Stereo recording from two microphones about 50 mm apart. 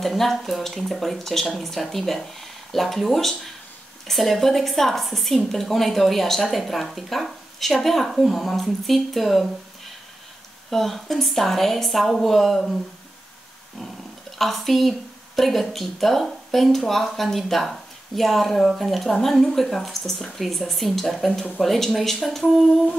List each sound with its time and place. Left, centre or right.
0.0 s a woman's voice: centre
10.7 s a woman's voice: centre
14.4 s a woman's voice: centre